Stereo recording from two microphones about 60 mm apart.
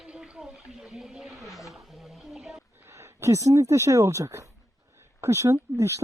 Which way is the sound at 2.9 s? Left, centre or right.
Right.